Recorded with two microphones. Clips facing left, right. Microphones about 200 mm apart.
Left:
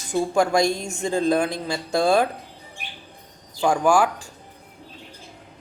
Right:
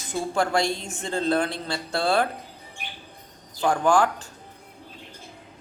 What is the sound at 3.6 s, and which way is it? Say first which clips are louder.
Speech: left 2 dB; 10° left (ahead or behind).